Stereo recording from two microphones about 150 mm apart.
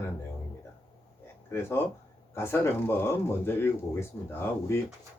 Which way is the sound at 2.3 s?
15° left (ahead or behind).